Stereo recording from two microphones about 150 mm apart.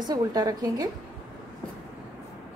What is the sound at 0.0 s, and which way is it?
Speech, 25° right (ahead or behind).